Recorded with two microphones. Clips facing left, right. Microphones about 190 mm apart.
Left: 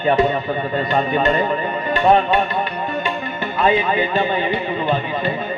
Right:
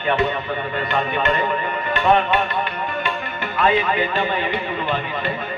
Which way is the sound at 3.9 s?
25° left (ahead or behind).